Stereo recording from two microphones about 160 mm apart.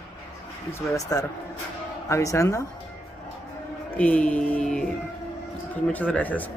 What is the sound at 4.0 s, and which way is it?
Speech, 5° left (ahead or behind).